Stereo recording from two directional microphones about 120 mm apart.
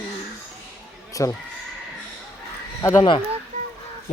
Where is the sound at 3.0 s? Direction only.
45° left (ahead or behind).